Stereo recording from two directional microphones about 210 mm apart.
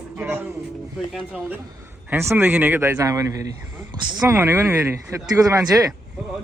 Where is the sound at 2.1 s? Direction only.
10° right (ahead or behind).